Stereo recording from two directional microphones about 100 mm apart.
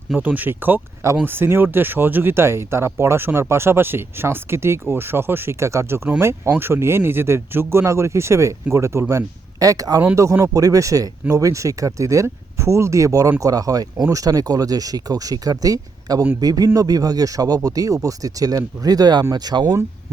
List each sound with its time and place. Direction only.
0.2 s speech: 15° right (ahead or behind); by 19.8 s 40° right (ahead or behind)